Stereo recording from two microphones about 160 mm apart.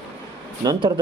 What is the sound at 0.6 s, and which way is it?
Speech, 25° right (ahead or behind).